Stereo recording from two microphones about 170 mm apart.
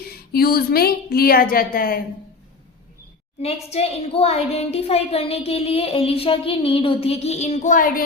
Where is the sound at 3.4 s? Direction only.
40° left (ahead or behind).